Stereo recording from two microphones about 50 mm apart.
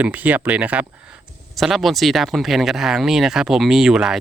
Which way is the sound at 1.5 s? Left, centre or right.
Centre.